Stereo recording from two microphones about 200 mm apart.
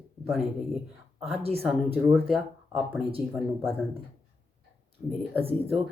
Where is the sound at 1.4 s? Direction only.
30° right (ahead or behind).